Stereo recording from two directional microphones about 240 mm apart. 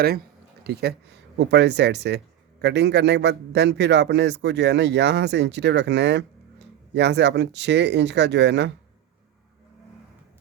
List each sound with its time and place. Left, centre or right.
0.6 s speech: right